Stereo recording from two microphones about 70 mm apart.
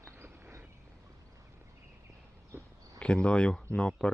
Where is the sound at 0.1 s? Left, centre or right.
Right.